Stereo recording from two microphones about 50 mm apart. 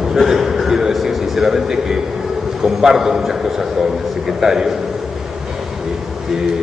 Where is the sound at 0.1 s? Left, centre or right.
Centre.